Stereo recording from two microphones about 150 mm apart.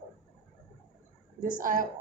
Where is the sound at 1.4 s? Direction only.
65° right (ahead or behind).